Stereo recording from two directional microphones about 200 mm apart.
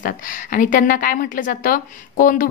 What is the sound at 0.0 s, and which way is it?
A woman's voice, 40° left (ahead or behind).